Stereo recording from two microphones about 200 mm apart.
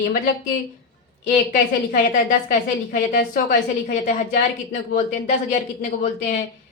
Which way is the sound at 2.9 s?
45° left (ahead or behind).